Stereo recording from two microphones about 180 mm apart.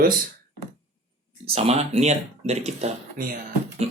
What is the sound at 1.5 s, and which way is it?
Speech, 35° right (ahead or behind).